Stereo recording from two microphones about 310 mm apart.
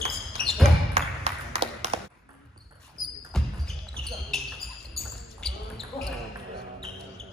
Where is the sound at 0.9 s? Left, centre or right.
Centre.